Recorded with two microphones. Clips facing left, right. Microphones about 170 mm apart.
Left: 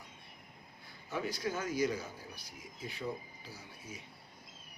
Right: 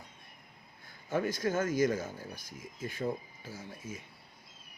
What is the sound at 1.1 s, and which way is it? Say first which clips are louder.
Speech: right 6 dB; 50° right (ahead or behind).